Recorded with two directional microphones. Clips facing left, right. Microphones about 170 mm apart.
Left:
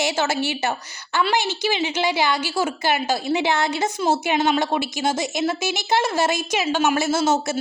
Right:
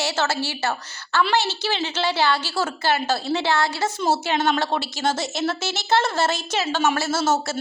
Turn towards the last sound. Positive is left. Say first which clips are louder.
# left 2 dB
turn(degrees=15)  # may be behind; listen again after turning